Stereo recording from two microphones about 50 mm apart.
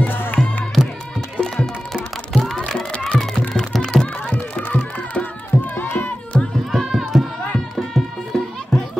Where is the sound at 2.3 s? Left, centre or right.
Centre.